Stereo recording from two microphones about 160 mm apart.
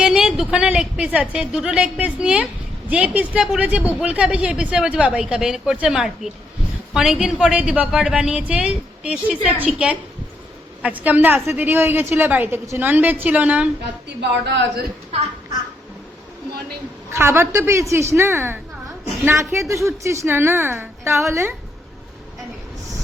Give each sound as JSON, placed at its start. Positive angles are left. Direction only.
{"t": 0.0, "sound": "a woman's voice", "side_deg": -5}
{"t": 14.2, "sound": "a woman's voice", "side_deg": -90}
{"t": 17.1, "sound": "speech", "side_deg": -15}